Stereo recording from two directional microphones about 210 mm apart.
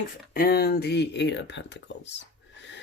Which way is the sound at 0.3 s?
45° left (ahead or behind).